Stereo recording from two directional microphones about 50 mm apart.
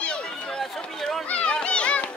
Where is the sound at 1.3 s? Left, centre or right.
Left.